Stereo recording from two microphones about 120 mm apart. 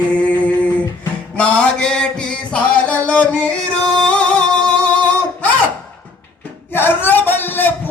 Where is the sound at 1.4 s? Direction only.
10° left (ahead or behind).